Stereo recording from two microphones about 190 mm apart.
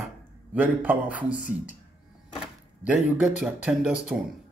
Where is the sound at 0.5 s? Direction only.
10° right (ahead or behind).